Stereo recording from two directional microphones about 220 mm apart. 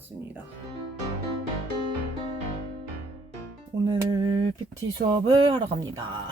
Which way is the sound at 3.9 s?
20° right (ahead or behind).